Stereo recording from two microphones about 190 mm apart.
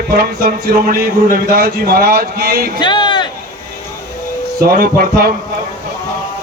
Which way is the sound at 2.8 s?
25° left (ahead or behind).